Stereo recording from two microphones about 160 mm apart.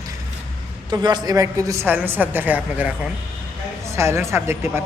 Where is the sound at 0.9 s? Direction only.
25° right (ahead or behind).